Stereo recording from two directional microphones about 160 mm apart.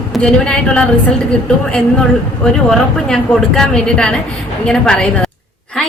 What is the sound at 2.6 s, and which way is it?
A woman's voice, 5° left (ahead or behind).